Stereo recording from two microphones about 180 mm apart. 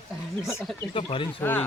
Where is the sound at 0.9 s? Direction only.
30° left (ahead or behind).